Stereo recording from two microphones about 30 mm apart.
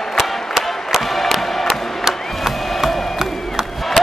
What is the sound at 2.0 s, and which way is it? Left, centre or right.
Crowd, centre.